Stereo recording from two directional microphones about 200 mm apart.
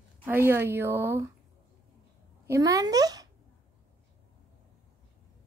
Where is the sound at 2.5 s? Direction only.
15° right (ahead or behind).